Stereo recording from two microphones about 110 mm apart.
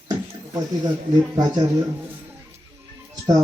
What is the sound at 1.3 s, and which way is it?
Speech, 35° right (ahead or behind).